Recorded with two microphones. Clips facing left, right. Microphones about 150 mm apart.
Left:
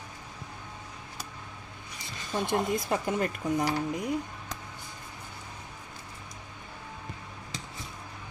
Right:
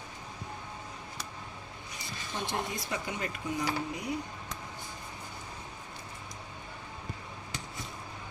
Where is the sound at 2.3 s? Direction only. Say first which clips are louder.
Left 7 dB; 50° left (ahead or behind).